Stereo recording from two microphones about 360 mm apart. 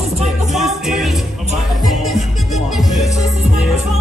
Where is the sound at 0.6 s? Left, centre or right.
Centre.